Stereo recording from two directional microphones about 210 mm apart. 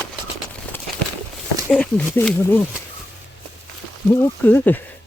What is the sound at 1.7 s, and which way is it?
Speech, 5° left (ahead or behind).